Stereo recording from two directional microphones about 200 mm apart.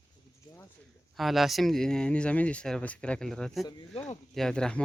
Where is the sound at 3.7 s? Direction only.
20° left (ahead or behind).